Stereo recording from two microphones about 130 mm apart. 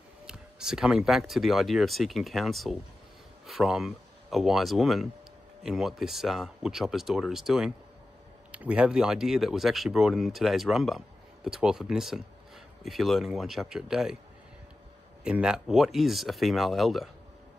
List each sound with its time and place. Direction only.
0.3 s speech: 5° right (ahead or behind)
15.2 s speech: 5° right (ahead or behind)